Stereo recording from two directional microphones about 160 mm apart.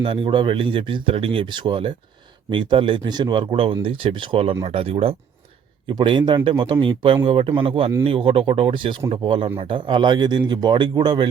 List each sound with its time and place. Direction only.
0.0 s a man's voice: 35° right (ahead or behind)